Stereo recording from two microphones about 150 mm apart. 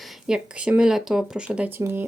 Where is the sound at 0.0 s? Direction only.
Centre (ahead or behind).